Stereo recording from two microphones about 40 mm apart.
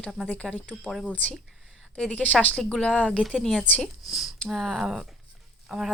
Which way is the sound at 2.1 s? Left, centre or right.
Left.